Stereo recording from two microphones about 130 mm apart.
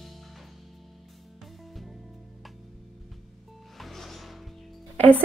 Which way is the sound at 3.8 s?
Centre (ahead or behind).